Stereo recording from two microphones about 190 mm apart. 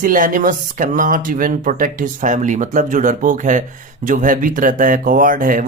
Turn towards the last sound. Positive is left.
turn(degrees=-45)  # may be behind; listen again after turning